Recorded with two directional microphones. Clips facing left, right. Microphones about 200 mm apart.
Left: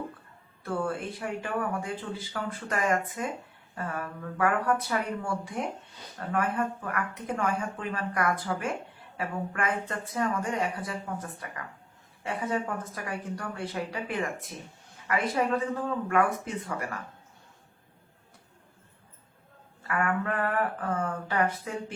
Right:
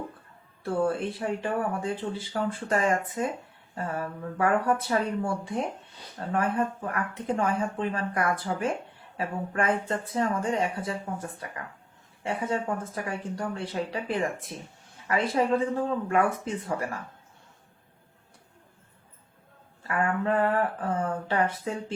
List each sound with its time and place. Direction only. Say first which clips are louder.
0.6 s speech: right 5 dB; 30° right (ahead or behind)
12.2 s speech: right 2 dB; 25° right (ahead or behind)
19.9 s speech: right 3 dB; 25° right (ahead or behind)